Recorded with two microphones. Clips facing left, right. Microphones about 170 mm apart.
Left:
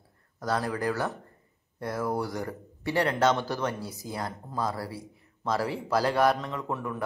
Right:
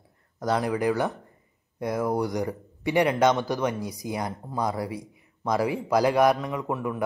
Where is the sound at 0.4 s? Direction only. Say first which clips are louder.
Right 4 dB; 20° right (ahead or behind).